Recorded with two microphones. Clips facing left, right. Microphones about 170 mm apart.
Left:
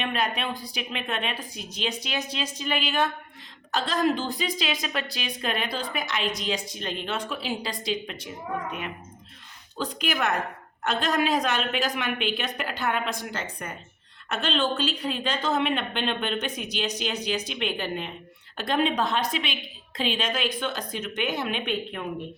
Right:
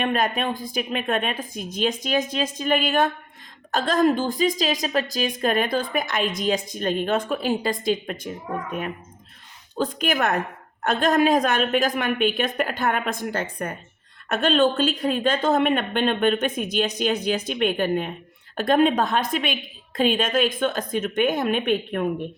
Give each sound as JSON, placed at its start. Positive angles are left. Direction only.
{"t": 0.0, "sound": "speech", "side_deg": -45}
{"t": 9.7, "sound": "speech", "side_deg": -50}